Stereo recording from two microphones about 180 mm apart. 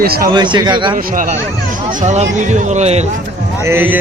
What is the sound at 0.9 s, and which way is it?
Speech, 50° right (ahead or behind).